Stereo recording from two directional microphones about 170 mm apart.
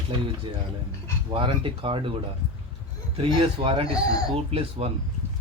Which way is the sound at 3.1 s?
30° right (ahead or behind).